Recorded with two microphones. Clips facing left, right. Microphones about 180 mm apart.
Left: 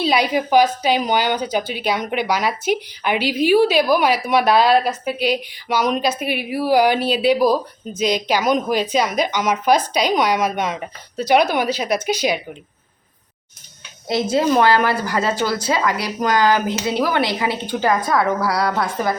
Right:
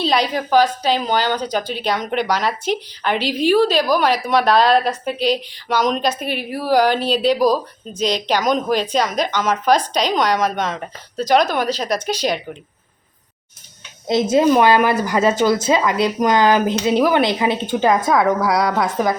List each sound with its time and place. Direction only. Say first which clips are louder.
0.0 s a woman's voice: left 1 dB; 10° left (ahead or behind)
14.1 s speech: right 3 dB; 20° right (ahead or behind)